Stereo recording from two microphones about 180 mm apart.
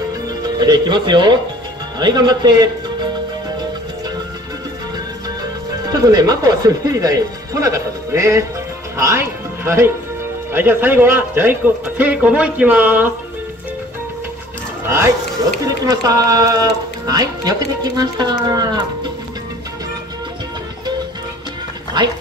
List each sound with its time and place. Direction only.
0.4 s speech: 25° right (ahead or behind)
5.9 s speech: 20° right (ahead or behind)
15.6 s speech: 20° right (ahead or behind)